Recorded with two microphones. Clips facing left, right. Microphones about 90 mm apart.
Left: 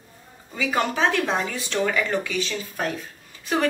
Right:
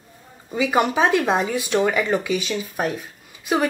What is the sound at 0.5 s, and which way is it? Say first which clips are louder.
Speech: right 5 dB; 15° right (ahead or behind).